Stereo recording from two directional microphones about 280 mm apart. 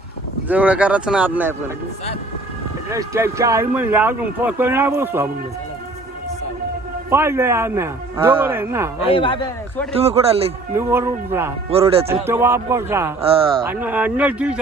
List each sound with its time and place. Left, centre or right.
0.4 s speech: centre
2.9 s speech: centre
7.1 s speech: centre
9.0 s speech: centre
9.9 s speech: right
10.8 s speech: centre
11.7 s speech: right
12.2 s speech: centre
13.7 s speech: centre